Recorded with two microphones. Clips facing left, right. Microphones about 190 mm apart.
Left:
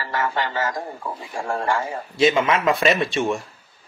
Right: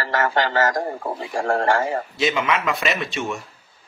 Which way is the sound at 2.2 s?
30° left (ahead or behind).